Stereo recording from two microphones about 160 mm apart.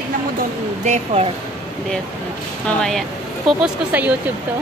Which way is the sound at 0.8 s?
40° right (ahead or behind).